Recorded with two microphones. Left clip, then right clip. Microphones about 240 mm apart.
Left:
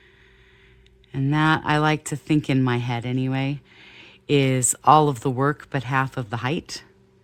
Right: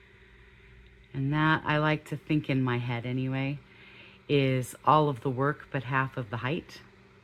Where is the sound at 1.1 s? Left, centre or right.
Left.